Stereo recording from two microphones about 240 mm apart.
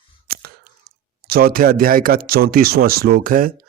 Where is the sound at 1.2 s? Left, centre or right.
Right.